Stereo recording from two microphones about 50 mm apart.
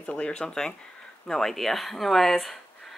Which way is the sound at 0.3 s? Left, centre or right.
Centre.